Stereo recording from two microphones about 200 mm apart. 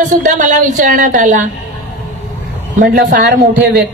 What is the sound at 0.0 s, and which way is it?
Speech, 40° right (ahead or behind).